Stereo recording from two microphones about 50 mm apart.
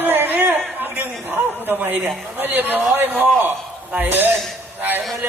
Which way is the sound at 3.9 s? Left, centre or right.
Right.